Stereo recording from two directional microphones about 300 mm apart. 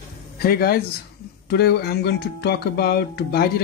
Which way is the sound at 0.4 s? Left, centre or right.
Left.